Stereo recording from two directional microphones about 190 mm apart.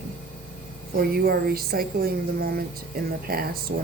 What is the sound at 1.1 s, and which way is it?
Speech, 55° right (ahead or behind).